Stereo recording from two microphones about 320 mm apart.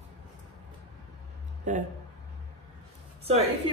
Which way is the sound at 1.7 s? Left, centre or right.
Right.